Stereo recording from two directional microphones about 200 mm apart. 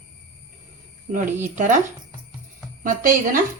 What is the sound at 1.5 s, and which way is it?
Speech, 40° right (ahead or behind).